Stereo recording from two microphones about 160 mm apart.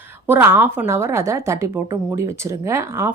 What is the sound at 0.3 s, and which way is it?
A woman's voice, 15° right (ahead or behind).